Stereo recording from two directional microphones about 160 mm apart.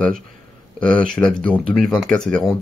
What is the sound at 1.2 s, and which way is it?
Speech, 20° left (ahead or behind).